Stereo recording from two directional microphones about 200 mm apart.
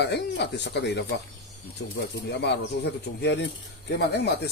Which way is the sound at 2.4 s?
60° left (ahead or behind).